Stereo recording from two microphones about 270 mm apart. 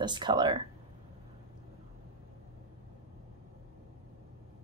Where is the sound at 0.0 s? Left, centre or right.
Centre.